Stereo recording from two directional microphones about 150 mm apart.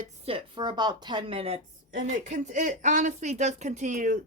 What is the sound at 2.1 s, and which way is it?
Speech, 55° right (ahead or behind).